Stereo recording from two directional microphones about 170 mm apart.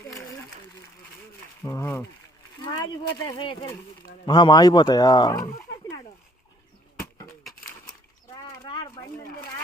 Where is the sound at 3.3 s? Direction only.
25° left (ahead or behind).